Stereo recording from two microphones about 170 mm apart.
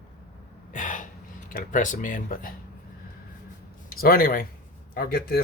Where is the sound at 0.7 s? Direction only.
50° left (ahead or behind).